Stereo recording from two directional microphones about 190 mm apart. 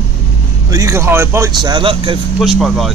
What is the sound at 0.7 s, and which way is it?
Speech, 15° right (ahead or behind).